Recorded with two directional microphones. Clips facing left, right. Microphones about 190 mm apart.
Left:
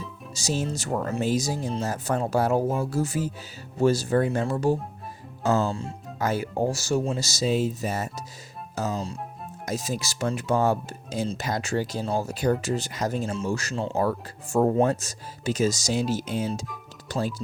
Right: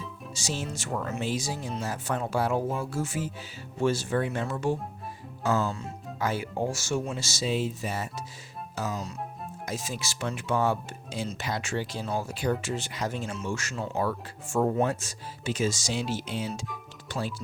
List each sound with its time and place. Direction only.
0.3 s speech: 40° left (ahead or behind)
6.1 s speech: 40° left (ahead or behind)
13.9 s speech: 40° left (ahead or behind)